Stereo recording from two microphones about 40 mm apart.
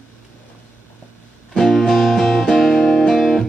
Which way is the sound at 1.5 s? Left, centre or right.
Centre.